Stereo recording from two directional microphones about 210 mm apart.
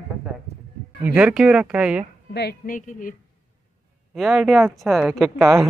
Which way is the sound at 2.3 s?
45° left (ahead or behind).